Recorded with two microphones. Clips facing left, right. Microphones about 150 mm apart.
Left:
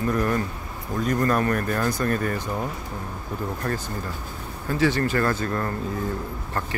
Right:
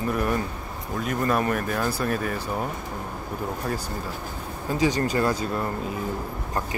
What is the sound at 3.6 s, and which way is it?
Speech, 10° right (ahead or behind).